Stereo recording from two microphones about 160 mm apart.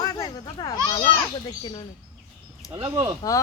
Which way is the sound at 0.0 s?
25° left (ahead or behind).